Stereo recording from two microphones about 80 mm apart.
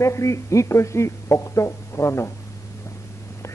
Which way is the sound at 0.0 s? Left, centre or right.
Left.